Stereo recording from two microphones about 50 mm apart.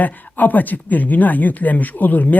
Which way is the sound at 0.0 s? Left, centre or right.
Left.